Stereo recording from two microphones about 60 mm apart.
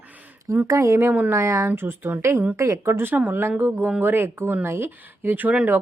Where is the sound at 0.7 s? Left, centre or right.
Right.